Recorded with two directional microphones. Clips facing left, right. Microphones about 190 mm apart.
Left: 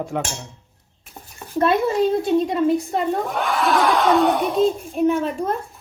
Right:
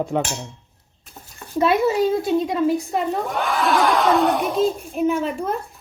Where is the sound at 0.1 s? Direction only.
25° right (ahead or behind).